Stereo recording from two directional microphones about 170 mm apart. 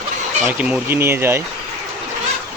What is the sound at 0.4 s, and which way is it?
Speech, 10° right (ahead or behind).